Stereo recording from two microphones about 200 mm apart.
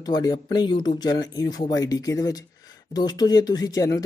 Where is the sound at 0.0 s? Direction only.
20° left (ahead or behind).